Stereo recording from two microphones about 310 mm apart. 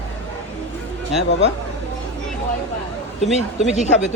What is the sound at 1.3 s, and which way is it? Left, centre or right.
Speech, left.